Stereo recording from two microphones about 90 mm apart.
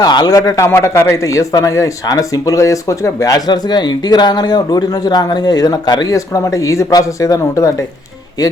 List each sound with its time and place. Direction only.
0.0 s a man's voice: 50° left (ahead or behind); by 7.9 s 35° left (ahead or behind)